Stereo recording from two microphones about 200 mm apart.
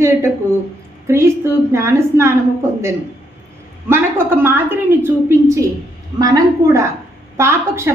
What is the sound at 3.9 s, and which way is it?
A woman's voice, 10° right (ahead or behind).